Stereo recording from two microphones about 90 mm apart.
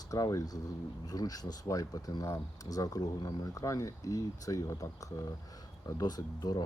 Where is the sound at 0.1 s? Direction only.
40° left (ahead or behind).